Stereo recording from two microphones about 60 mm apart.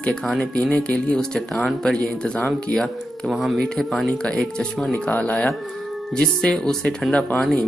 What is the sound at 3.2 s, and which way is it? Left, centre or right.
Speech, centre.